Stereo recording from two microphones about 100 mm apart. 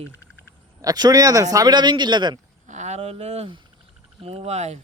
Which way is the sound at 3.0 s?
90° right.